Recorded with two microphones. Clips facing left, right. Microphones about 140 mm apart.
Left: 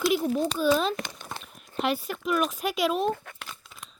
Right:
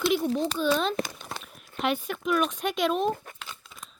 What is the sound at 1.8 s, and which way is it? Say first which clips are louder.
A woman's voice: even; centre (ahead or behind).